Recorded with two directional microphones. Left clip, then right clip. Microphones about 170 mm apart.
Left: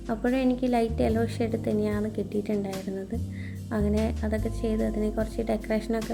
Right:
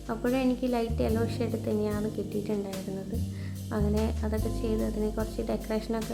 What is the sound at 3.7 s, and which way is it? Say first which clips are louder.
Speech: left 2 dB; 15° left (ahead or behind).